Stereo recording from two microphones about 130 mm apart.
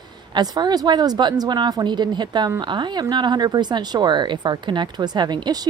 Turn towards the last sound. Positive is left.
turn(degrees=-35)  # may be behind; listen again after turning